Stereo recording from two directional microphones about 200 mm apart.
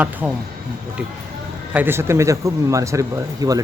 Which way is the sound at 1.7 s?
10° right (ahead or behind).